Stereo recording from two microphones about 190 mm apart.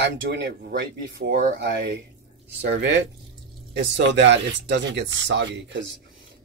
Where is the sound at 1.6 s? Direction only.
70° right (ahead or behind).